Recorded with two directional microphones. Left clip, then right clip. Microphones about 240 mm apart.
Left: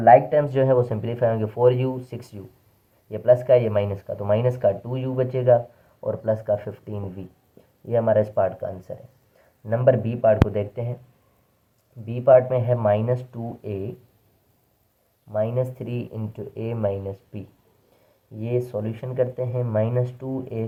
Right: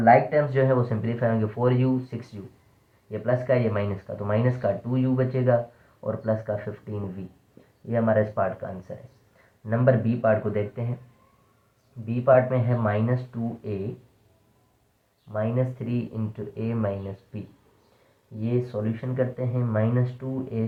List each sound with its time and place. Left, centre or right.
0.0 s speech: centre
12.0 s speech: centre
15.3 s speech: centre
18.4 s speech: centre